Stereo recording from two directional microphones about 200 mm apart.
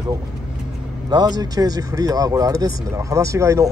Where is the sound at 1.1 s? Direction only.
20° right (ahead or behind).